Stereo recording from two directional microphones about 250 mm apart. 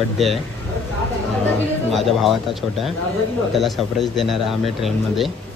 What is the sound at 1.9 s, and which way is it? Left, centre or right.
Speech, centre.